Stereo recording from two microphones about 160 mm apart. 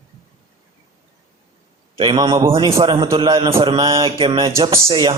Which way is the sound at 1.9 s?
30° right (ahead or behind).